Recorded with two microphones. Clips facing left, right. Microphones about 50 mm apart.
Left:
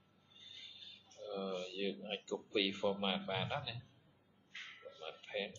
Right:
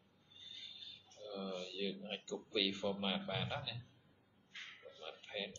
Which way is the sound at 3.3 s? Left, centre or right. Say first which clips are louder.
Left 2 dB; centre.